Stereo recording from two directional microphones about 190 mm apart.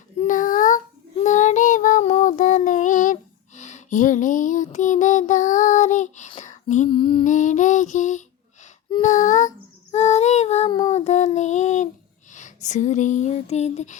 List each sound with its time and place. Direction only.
0.2 s child singing: 45° left (ahead or behind)
6.9 s lullaby: 25° left (ahead or behind)
7.3 s lullaby: 40° left (ahead or behind)
9.0 s female singing: 40° left (ahead or behind)
9.9 s child singing: 35° left (ahead or behind)
10.7 s child singing: 20° left (ahead or behind)
10.9 s child singing: 35° left (ahead or behind)
12.3 s a sound: 40° left (ahead or behind)